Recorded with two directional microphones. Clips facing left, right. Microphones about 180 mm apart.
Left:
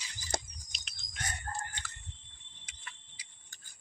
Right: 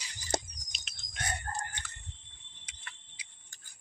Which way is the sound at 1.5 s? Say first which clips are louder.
Left 1 dB; 45° right (ahead or behind).